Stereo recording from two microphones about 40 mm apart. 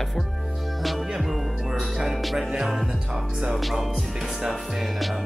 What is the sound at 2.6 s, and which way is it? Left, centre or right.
Speech, centre.